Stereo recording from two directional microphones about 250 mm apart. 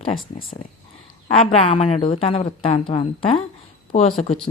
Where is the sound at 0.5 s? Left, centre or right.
Left.